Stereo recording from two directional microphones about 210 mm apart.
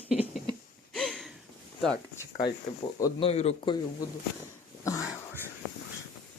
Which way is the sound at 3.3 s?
30° left (ahead or behind).